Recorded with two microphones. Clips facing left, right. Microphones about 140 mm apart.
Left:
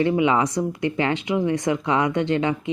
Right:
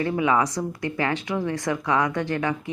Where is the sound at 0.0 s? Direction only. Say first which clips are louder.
Left 3 dB; 20° left (ahead or behind).